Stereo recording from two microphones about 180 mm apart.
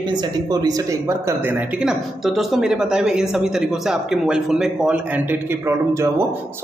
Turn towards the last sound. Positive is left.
turn(degrees=-15)  # may be behind; listen again after turning